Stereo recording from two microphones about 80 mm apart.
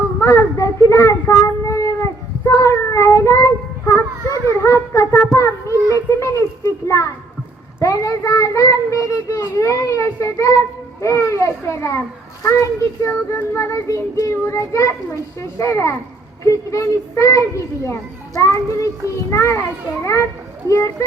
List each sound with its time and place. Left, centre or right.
0.2 s a child's voice: left
1.3 s child singing: left
4.4 s a child's voice: left
5.9 s a sound: left
7.8 s a child's voice: left
20.7 s a child's voice: left